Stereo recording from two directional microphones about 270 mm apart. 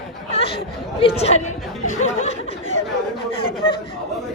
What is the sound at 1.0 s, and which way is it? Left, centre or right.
Speech, left.